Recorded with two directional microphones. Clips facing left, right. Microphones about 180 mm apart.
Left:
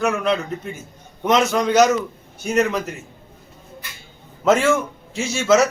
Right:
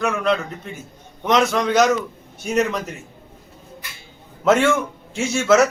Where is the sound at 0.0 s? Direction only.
5° left (ahead or behind).